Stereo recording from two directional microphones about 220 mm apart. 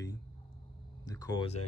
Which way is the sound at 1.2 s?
20° left (ahead or behind).